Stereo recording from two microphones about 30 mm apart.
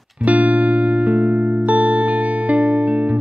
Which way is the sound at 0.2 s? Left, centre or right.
Right.